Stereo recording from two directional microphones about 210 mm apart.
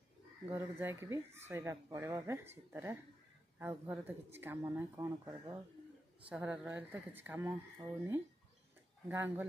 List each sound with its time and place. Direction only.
0.5 s speech: 10° right (ahead or behind)